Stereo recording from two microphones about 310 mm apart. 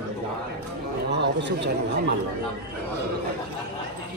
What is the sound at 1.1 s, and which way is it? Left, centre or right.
Speech, right.